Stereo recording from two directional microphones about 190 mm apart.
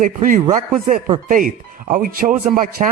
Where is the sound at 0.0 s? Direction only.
45° right (ahead or behind).